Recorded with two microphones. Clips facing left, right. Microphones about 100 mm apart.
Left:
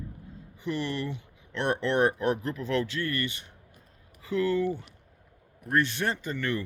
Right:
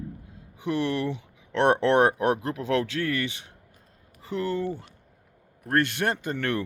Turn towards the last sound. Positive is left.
turn(degrees=-65)  # may be behind; listen again after turning